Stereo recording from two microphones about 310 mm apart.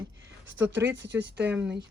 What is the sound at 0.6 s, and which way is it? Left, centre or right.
Speech, centre.